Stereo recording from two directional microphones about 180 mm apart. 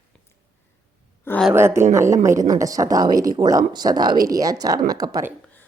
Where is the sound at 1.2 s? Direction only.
10° left (ahead or behind).